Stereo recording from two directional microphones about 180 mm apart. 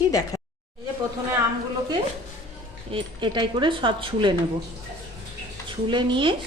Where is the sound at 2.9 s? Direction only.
30° right (ahead or behind).